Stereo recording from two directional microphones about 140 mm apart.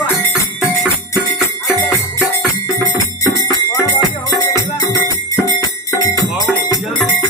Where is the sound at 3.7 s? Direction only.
25° left (ahead or behind).